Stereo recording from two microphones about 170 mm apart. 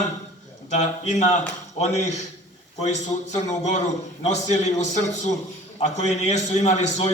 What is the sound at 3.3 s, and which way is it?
A man's voice, 45° left (ahead or behind).